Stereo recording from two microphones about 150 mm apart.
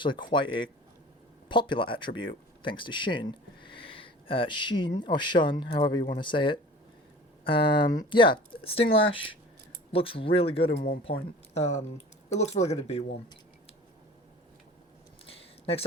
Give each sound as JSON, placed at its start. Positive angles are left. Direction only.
{"t": 0.0, "sound": "speech", "side_deg": 30}
{"t": 10.8, "sound": "speech", "side_deg": 80}
{"t": 11.5, "sound": "speech", "side_deg": 50}
{"t": 15.3, "sound": "a sound", "side_deg": 40}